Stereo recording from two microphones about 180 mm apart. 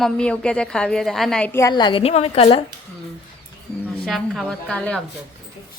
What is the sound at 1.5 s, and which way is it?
A woman's voice, 20° left (ahead or behind).